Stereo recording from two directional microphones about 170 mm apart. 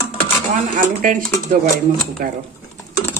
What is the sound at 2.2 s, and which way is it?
Speech, 60° right (ahead or behind).